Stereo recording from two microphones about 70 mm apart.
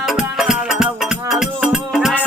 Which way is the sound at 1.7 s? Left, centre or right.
Centre.